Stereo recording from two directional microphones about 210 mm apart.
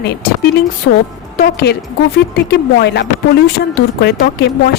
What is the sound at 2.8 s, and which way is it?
Speech, 55° left (ahead or behind).